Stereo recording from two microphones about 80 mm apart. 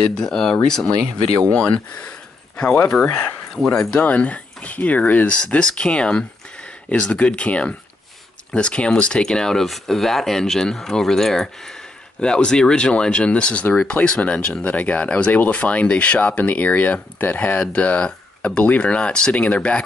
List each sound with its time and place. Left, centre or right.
0.1 s speech: centre